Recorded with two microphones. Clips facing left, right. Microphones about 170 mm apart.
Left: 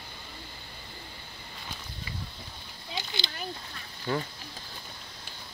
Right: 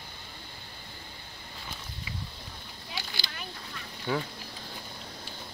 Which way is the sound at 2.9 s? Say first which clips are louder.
Left 4 dB; 20° left (ahead or behind).